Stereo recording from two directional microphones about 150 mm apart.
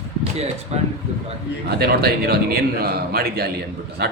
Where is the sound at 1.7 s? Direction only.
90° right.